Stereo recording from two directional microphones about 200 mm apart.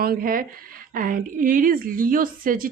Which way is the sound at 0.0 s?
45° right (ahead or behind).